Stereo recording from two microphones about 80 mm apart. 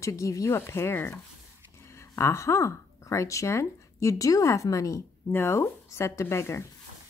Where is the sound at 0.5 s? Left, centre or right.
Left.